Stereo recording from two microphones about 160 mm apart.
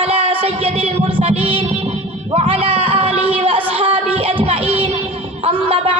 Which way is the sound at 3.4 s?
35° right (ahead or behind).